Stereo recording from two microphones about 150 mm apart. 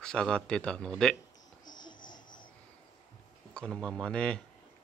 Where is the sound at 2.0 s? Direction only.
65° left (ahead or behind).